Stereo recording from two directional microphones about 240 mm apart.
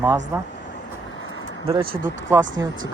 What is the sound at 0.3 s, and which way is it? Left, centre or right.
Speech, centre.